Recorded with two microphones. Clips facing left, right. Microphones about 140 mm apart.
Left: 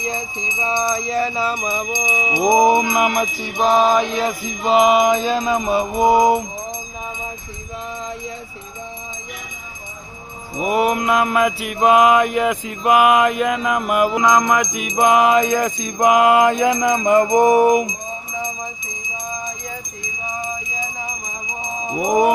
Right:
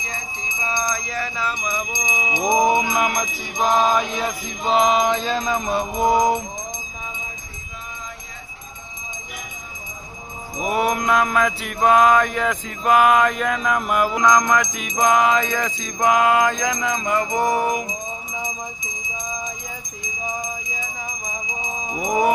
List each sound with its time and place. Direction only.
0.7 s music: 25° left (ahead or behind)
2.0 s a sound: 5° left (ahead or behind)
2.6 s mantra: 5° left (ahead or behind)
10.6 s mantra: 5° left (ahead or behind)
17.3 s music: 20° left (ahead or behind)
21.9 s mantra: 10° left (ahead or behind)